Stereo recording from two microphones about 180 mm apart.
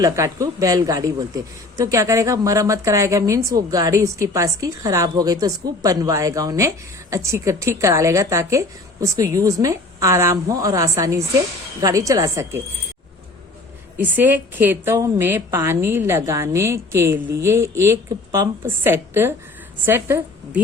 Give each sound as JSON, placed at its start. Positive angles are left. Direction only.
{"t": 0.0, "sound": "speech", "side_deg": -20}
{"t": 14.0, "sound": "a woman's voice", "side_deg": -10}